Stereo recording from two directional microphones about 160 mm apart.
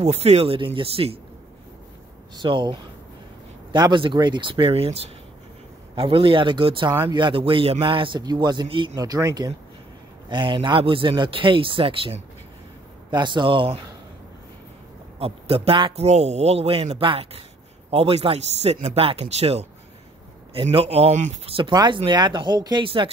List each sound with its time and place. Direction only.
0.0 s speech: 40° right (ahead or behind)
2.3 s a man's voice: 30° right (ahead or behind)
15.1 s speech: 35° right (ahead or behind)
21.5 s a man's voice: 30° right (ahead or behind)